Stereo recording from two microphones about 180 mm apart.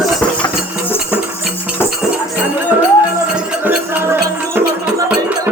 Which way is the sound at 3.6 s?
10° right (ahead or behind).